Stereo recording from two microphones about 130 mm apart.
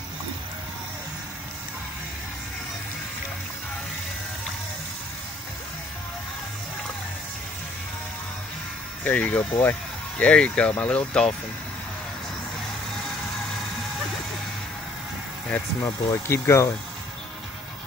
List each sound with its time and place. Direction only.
9.0 s speech: 10° left (ahead or behind)
15.8 s speech: 20° left (ahead or behind)